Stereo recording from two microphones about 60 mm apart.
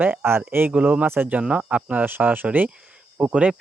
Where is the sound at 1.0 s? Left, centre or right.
Right.